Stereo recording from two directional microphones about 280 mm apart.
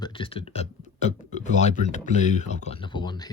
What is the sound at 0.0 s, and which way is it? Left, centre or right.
Speech, centre.